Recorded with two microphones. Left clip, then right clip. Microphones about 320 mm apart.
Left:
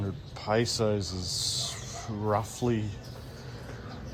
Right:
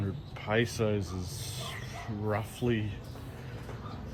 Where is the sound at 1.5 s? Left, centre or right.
Centre.